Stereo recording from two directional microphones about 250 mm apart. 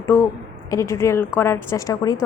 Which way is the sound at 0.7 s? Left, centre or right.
Centre.